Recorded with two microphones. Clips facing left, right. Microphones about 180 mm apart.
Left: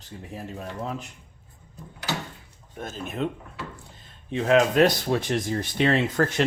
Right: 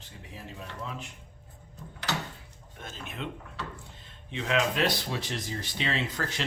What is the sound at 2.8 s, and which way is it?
Speech, 40° left (ahead or behind).